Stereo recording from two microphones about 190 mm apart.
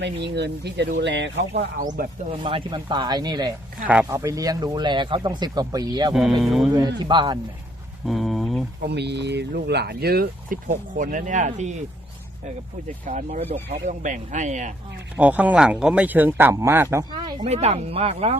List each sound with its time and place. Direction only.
0.3 s speech: 60° right (ahead or behind)
1.8 s speech: 45° right (ahead or behind)
2.4 s speech: 25° right (ahead or behind)
6.1 s speech: centre (ahead or behind)
6.7 s speech: 25° right (ahead or behind)
8.0 s a sound: centre (ahead or behind)
8.8 s speech: 60° right (ahead or behind); by 11.7 s 40° right (ahead or behind)
13.1 s speech: 40° right (ahead or behind)
15.1 s speech: 5° right (ahead or behind)
17.4 s speech: 35° right (ahead or behind)